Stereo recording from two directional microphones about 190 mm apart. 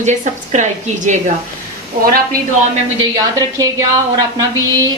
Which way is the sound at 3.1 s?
15° right (ahead or behind).